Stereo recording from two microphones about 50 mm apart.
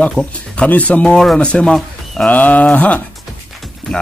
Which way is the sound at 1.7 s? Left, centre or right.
Centre.